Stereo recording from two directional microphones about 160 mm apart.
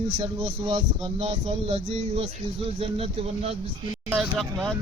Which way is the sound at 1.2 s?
40° right (ahead or behind).